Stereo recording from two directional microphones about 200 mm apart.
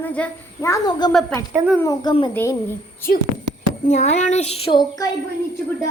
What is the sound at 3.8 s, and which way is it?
Speech, 35° left (ahead or behind).